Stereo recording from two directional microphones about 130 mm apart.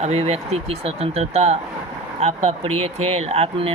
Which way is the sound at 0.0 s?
55° right (ahead or behind).